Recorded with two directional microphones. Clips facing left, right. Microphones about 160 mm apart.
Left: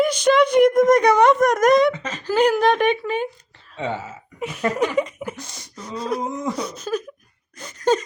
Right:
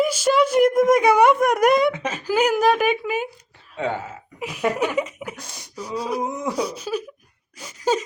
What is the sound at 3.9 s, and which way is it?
Speech, centre (ahead or behind).